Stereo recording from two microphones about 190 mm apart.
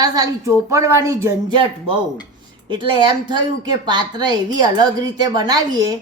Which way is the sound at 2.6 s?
25° right (ahead or behind).